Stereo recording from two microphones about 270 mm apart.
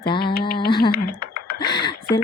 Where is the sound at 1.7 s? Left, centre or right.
Centre.